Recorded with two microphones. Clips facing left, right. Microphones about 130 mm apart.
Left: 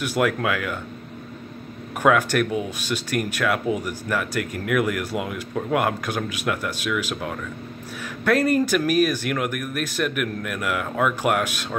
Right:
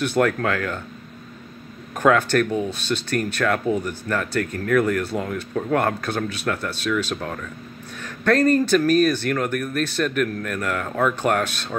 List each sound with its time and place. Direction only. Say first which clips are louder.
0.0 s speech: right 2 dB; 10° left (ahead or behind)
2.0 s speech: right 1 dB; 10° left (ahead or behind)